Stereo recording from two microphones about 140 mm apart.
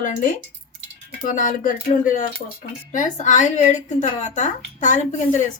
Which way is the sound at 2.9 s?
65° left (ahead or behind).